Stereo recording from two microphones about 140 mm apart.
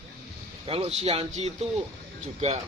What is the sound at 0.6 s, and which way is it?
Speech, 45° right (ahead or behind).